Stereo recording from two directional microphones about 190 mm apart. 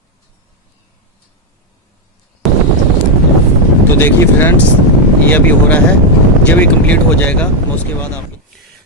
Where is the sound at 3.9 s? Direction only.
10° left (ahead or behind).